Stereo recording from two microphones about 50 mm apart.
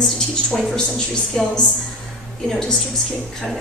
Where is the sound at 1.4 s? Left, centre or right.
Centre.